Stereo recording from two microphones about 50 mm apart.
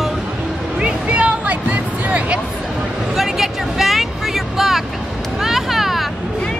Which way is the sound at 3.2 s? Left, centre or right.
Centre.